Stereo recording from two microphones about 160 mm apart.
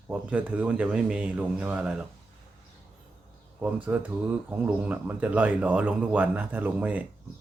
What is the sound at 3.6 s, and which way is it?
Speech, 10° right (ahead or behind).